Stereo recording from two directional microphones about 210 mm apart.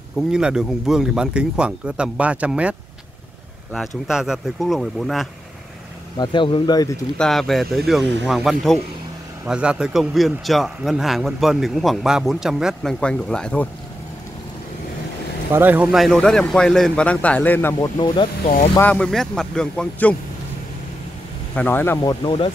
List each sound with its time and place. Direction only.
0.3 s a man's voice: 5° right (ahead or behind)
4.1 s a man's voice: centre (ahead or behind)
6.1 s speech: 20° left (ahead or behind)
7.2 s a man's voice: centre (ahead or behind)
15.5 s a man's voice: 10° right (ahead or behind); by 18.5 s 20° left (ahead or behind)
18.8 s a man's voice: 5° left (ahead or behind)
21.5 s speech: 10° left (ahead or behind)